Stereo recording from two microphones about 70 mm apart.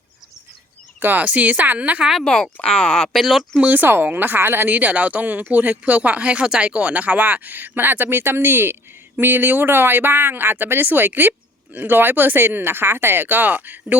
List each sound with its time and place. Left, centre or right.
0.9 s speech: right
2.2 s speech: centre
3.2 s speech: centre
3.6 s speech: right